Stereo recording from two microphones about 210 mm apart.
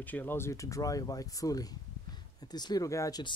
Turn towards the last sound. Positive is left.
turn(degrees=15)  # may be behind; listen again after turning